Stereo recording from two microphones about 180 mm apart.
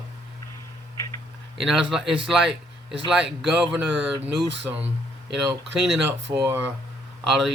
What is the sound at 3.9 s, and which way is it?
Speech, 75° right (ahead or behind).